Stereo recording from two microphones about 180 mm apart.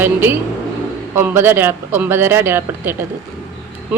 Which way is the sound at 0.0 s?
10° right (ahead or behind).